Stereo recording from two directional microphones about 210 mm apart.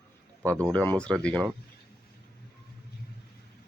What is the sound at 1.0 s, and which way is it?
Speech, 5° left (ahead or behind).